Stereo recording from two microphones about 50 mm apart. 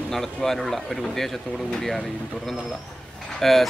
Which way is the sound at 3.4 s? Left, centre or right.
Centre.